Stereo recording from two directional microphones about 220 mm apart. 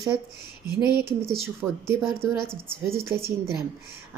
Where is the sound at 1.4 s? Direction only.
10° right (ahead or behind).